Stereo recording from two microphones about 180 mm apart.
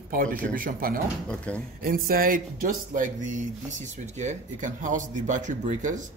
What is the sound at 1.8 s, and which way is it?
Speech, 50° right (ahead or behind).